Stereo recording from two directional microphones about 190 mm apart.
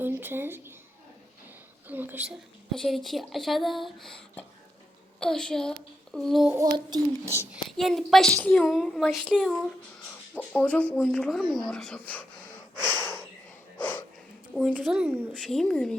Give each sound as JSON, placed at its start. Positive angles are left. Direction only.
{"t": 0.0, "sound": "speech", "side_deg": -10}
{"t": 1.9, "sound": "a child's voice", "side_deg": -10}
{"t": 6.5, "sound": "a child's voice", "side_deg": -20}
{"t": 7.5, "sound": "a woman's voice", "side_deg": 0}
{"t": 12.9, "sound": "a sound", "side_deg": 10}
{"t": 14.5, "sound": "a woman's voice", "side_deg": 0}
{"t": 15.3, "sound": "a woman's voice", "side_deg": 0}